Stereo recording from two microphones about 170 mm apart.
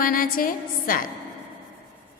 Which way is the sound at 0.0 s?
55° left (ahead or behind).